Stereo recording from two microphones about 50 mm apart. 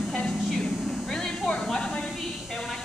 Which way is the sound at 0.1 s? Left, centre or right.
Centre.